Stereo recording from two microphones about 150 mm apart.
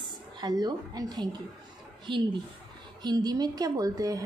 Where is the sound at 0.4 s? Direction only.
25° right (ahead or behind).